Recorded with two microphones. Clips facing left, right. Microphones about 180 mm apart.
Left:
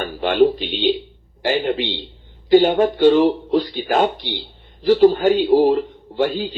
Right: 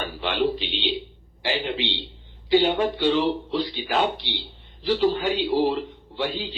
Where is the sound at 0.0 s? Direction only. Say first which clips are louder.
Left 8 dB; 50° left (ahead or behind).